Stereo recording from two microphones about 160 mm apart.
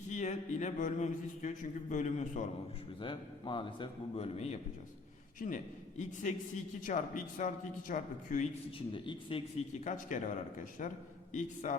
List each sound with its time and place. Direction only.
0.1 s a man's voice: 50° left (ahead or behind)
3.0 s a man's voice: 30° left (ahead or behind)
5.4 s a man's voice: 60° left (ahead or behind)
6.0 s a man's voice: 50° left (ahead or behind)
8.9 s a man's voice: 30° left (ahead or behind)
9.8 s a man's voice: 50° left (ahead or behind)